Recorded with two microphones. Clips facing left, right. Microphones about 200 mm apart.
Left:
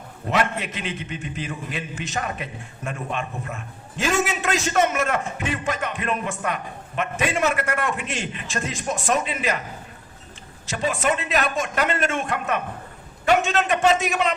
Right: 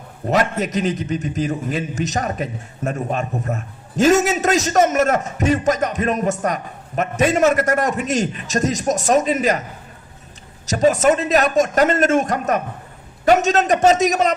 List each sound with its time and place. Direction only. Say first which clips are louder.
0.3 s a man's voice: right 5 dB; 40° right (ahead or behind)
10.7 s a man's voice: right 9 dB; 40° right (ahead or behind)